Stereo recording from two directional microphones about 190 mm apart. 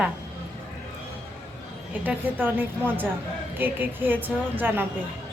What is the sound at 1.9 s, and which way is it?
A woman's voice, 10° right (ahead or behind).